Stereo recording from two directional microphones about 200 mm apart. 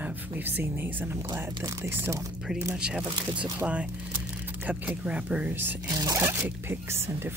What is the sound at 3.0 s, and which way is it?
Speech, 25° right (ahead or behind).